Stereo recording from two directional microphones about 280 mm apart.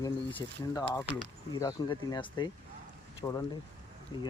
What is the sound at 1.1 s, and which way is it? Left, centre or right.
Speech, centre.